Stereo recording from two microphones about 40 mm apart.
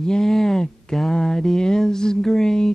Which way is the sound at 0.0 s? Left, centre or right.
Centre.